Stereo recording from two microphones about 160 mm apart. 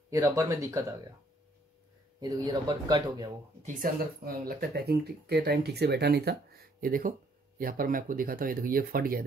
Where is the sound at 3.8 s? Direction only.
70° right (ahead or behind); by 6.4 s 90° right.